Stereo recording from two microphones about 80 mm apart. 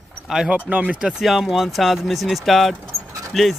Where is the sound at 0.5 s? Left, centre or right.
Centre.